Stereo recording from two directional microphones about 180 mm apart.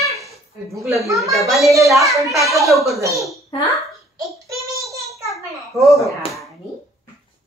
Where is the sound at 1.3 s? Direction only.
Centre (ahead or behind).